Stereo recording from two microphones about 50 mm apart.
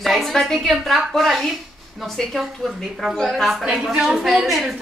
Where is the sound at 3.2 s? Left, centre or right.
Centre.